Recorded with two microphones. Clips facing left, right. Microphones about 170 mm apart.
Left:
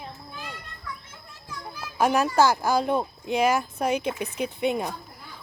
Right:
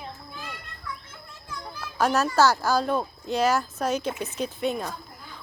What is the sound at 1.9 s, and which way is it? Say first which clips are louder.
Speech: left 1 dB; 15° left (ahead or behind).